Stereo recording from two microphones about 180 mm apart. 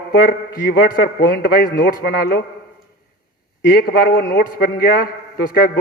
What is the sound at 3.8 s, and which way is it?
A man's voice, 55° left (ahead or behind).